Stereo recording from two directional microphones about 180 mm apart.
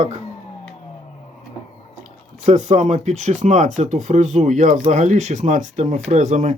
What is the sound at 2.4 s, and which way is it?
Speech, 45° right (ahead or behind).